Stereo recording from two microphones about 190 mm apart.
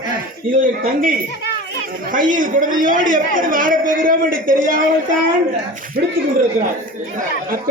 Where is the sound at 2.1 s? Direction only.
45° right (ahead or behind).